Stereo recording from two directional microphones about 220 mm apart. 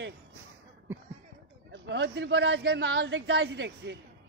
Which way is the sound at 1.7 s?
55° right (ahead or behind).